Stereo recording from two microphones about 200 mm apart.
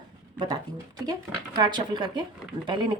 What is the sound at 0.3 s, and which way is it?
Speech, 20° right (ahead or behind).